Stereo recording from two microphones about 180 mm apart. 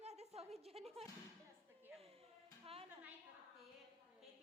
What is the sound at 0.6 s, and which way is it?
Music, 35° right (ahead or behind).